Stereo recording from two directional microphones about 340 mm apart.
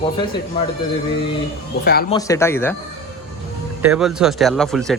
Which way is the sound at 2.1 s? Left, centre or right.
Centre.